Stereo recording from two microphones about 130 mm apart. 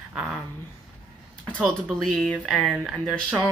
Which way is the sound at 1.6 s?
Centre (ahead or behind).